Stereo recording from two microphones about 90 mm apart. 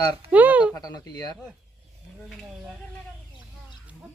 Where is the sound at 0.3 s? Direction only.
15° right (ahead or behind).